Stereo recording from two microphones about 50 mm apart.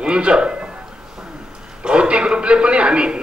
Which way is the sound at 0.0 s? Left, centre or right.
Centre.